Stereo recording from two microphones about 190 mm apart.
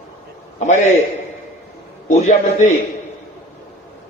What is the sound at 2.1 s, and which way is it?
Speech, 40° left (ahead or behind).